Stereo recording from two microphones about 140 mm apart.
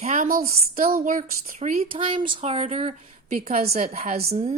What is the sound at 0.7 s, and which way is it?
Speech, 90° right.